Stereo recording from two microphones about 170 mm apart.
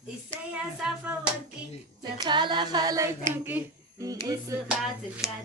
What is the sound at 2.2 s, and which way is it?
Female singing, 25° right (ahead or behind).